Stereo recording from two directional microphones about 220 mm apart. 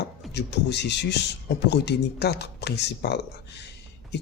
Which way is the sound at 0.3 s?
50° left (ahead or behind).